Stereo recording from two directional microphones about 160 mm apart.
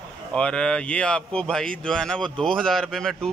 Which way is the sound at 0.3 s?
5° left (ahead or behind).